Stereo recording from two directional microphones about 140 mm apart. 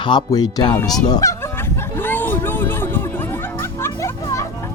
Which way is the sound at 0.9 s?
25° left (ahead or behind).